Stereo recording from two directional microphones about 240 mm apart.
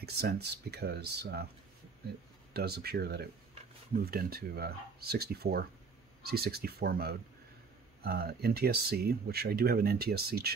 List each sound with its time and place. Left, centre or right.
0.0 s speech: right
2.5 s speech: right